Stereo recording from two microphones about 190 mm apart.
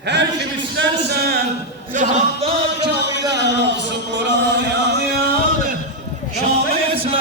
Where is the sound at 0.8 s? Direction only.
55° right (ahead or behind).